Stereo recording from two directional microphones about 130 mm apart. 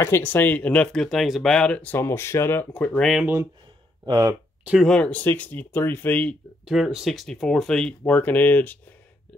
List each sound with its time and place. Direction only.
0.0 s speech: 15° left (ahead or behind)
4.0 s speech: 30° right (ahead or behind)
4.8 s speech: 5° left (ahead or behind)
6.6 s speech: centre (ahead or behind); by 8.7 s 15° left (ahead or behind)